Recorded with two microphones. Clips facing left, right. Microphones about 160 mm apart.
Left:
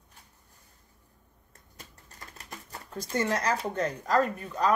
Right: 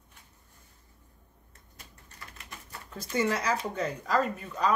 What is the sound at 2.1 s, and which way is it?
Typewriter, 40° left (ahead or behind).